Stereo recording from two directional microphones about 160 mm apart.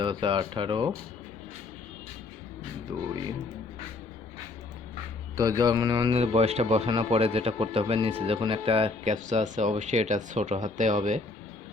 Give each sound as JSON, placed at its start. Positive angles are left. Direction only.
{"t": 0.0, "sound": "speech", "side_deg": -30}
{"t": 5.4, "sound": "mantra", "side_deg": -20}
{"t": 6.1, "sound": "speech", "side_deg": -40}
{"t": 9.1, "sound": "speech", "side_deg": -50}